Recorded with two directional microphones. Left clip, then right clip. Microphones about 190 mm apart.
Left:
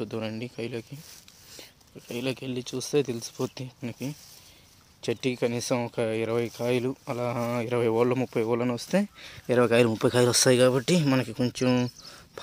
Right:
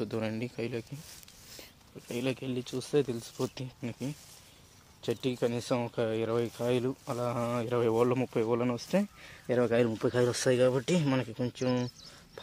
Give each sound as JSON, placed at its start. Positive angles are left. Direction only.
{"t": 0.0, "sound": "speech", "side_deg": 5}